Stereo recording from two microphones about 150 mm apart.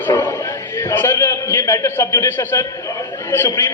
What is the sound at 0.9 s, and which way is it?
A man's voice, 15° left (ahead or behind).